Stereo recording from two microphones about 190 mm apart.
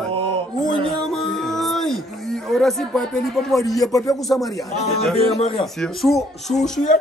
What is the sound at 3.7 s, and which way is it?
Speech, 20° left (ahead or behind).